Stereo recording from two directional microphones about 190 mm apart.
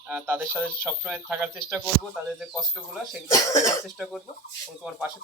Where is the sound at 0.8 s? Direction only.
5° right (ahead or behind).